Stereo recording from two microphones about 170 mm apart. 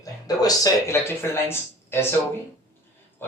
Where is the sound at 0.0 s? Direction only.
20° left (ahead or behind).